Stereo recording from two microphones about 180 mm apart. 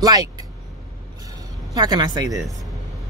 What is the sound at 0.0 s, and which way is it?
Speech, 20° right (ahead or behind).